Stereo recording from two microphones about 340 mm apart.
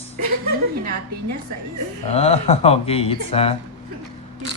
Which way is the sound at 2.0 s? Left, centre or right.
Centre.